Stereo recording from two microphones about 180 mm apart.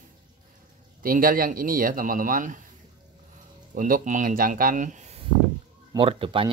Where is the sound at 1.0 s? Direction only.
50° right (ahead or behind).